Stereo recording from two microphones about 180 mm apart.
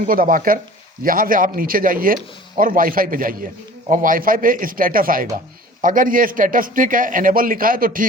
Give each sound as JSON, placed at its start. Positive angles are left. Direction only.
{"t": 0.0, "sound": "a man's voice", "side_deg": -50}